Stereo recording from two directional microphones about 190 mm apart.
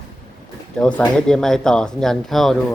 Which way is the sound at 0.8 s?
5° left (ahead or behind).